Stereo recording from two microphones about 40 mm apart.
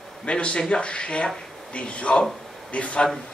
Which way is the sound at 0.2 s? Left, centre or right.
Left.